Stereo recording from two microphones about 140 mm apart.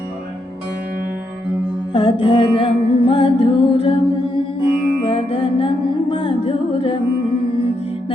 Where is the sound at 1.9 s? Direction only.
40° left (ahead or behind).